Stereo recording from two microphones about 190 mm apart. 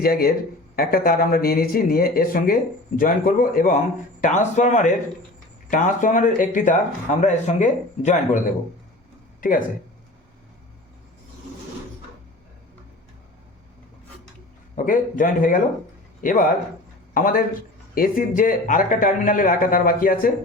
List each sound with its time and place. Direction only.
0.0 s speech: 50° left (ahead or behind)
9.4 s speech: 45° left (ahead or behind)
14.8 s speech: 45° left (ahead or behind)